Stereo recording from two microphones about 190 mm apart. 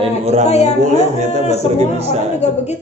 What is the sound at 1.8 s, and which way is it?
Speech, 35° right (ahead or behind).